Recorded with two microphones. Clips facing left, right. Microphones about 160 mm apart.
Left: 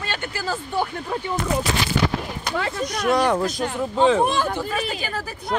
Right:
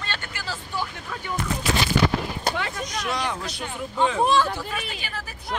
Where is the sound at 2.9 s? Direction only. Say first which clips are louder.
Left 10 dB; 55° left (ahead or behind).